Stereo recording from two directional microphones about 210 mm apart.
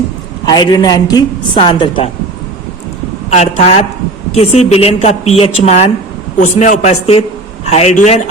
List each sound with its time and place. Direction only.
0.4 s a woman's voice: 20° left (ahead or behind)
3.2 s a man's voice: 30° left (ahead or behind)